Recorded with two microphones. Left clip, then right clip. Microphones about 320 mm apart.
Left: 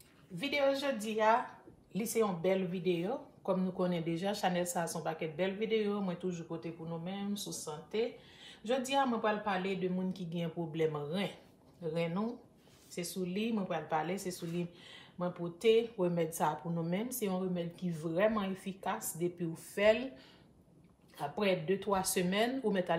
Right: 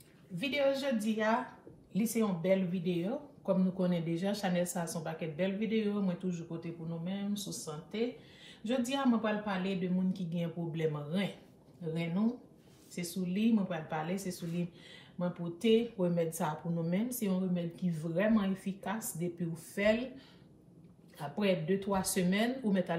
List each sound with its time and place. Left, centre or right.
0.6 s speech: centre
7.9 s speech: centre
21.4 s speech: centre